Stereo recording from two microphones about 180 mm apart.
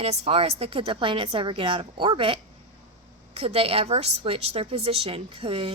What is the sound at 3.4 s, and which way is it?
A woman's voice, 35° right (ahead or behind).